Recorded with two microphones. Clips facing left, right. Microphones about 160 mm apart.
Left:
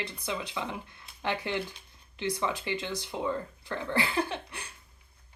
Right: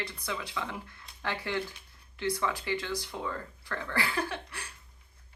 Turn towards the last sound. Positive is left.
turn(degrees=20)  # may be behind; listen again after turning